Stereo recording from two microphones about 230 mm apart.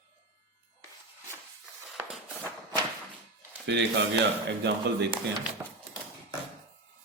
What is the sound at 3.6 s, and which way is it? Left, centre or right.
Speech, right.